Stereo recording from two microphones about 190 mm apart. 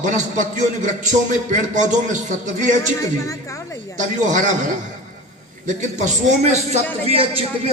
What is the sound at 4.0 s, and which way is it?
A man's voice, 40° right (ahead or behind).